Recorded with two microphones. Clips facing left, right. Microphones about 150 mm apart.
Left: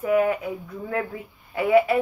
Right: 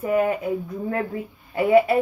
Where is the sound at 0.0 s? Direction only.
35° right (ahead or behind).